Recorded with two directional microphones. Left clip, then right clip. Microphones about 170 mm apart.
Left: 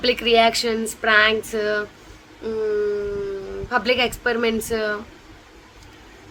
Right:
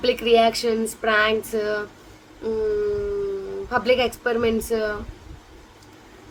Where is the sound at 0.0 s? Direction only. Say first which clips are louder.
Left 1 dB; centre (ahead or behind).